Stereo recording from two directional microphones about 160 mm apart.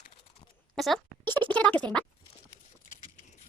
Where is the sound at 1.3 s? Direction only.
10° left (ahead or behind).